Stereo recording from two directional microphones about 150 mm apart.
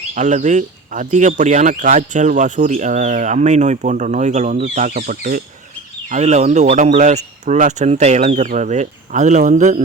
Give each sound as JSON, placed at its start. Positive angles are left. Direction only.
{"t": 0.1, "sound": "speech", "side_deg": -55}
{"t": 6.1, "sound": "speech", "side_deg": -50}